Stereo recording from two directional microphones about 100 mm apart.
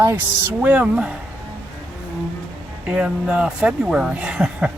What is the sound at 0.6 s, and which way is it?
Speech, 10° right (ahead or behind).